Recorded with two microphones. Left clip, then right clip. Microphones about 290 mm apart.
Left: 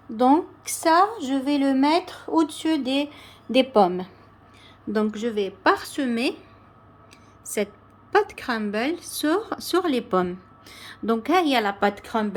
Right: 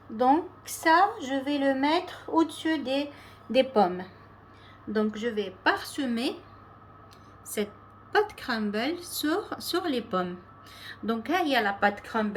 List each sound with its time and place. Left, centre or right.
0.2 s a woman's voice: left
8.1 s speech: centre